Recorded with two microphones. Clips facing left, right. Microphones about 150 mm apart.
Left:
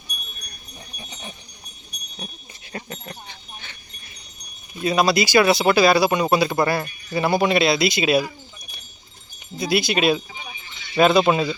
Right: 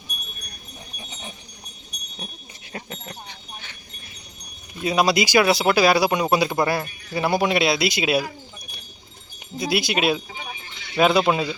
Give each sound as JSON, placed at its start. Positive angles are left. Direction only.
{"t": 2.7, "sound": "a sound", "side_deg": 0}
{"t": 4.8, "sound": "speech", "side_deg": -10}
{"t": 9.6, "sound": "speech", "side_deg": -10}